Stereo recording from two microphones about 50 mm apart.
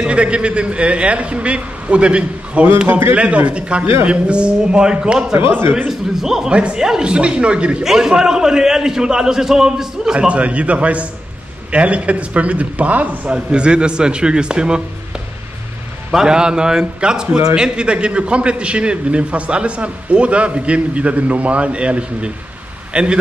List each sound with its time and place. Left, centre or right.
0.0 s a man's voice: right
5.4 s speech: right
5.9 s a man's voice: centre
7.8 s a man's voice: centre
10.2 s a man's voice: right
13.3 s a man's voice: centre
16.1 s a man's voice: centre